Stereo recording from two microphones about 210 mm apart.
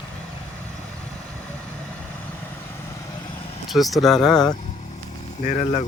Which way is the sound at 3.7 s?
Centre (ahead or behind).